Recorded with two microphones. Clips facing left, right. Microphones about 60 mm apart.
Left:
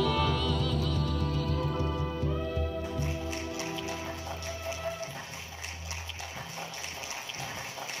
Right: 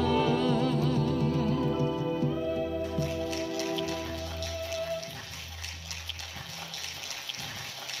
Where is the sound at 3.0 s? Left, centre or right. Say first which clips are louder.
Right 4 dB; left.